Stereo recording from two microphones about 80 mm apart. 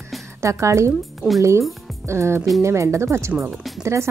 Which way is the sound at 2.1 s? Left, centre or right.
Right.